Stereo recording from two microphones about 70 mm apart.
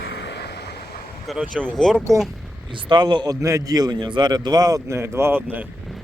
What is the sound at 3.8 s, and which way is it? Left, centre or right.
Speech, right.